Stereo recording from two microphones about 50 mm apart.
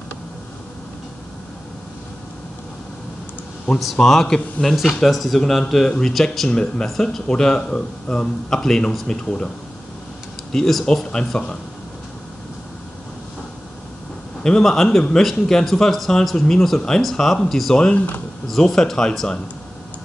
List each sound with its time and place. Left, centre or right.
3.8 s a man's voice: centre
6.5 s a man's voice: centre
10.5 s a man's voice: centre
14.4 s a man's voice: centre
17.9 s speech: left
18.5 s a man's voice: centre